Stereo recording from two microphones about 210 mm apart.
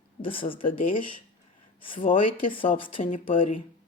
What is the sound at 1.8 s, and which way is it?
Speech, 25° left (ahead or behind).